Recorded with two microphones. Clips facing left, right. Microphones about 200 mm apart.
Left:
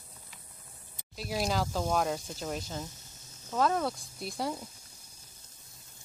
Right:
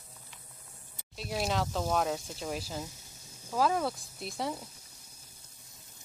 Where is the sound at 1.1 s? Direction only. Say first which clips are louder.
Left 1 dB; centre (ahead or behind).